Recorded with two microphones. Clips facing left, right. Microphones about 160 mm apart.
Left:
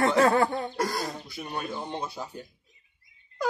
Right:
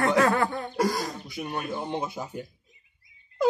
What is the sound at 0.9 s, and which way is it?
Throat clearing, 15° right (ahead or behind).